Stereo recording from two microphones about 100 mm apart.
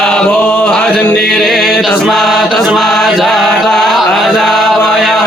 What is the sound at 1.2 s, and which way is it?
Chant, 5° left (ahead or behind).